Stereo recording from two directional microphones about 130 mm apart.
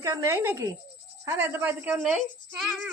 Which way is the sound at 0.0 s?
25° right (ahead or behind).